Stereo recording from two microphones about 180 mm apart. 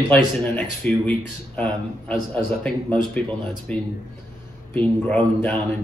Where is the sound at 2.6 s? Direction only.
5° left (ahead or behind).